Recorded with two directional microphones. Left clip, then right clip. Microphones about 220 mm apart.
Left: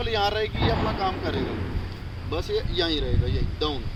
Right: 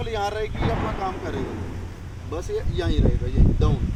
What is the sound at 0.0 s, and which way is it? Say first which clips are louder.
Speech: left 2 dB; centre (ahead or behind).